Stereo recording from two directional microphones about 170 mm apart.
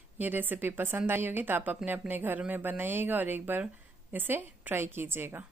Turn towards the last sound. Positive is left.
turn(degrees=-15)  # may be behind; listen again after turning